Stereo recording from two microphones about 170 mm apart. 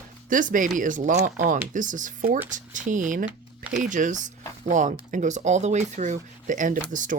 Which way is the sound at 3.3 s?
10° right (ahead or behind).